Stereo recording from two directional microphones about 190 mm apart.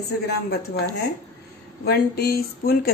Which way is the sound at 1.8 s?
55° left (ahead or behind).